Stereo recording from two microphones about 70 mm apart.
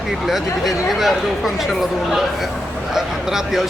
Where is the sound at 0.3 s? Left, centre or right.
Centre.